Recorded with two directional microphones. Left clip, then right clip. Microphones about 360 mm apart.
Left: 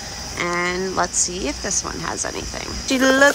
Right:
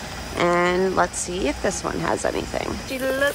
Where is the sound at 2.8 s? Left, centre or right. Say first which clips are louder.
Left 9 dB; left.